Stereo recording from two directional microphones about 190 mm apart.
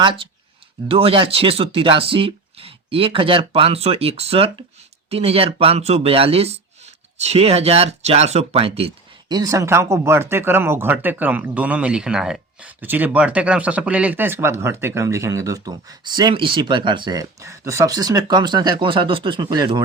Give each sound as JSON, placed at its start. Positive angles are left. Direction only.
{"t": 0.0, "sound": "speech", "side_deg": -25}
{"t": 9.3, "sound": "speech", "side_deg": -20}